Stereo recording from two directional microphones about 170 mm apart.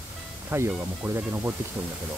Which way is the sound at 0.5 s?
15° right (ahead or behind).